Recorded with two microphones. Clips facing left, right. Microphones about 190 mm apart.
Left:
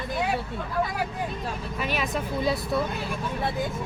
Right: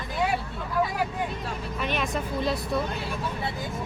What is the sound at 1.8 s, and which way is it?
Speech, 5° left (ahead or behind).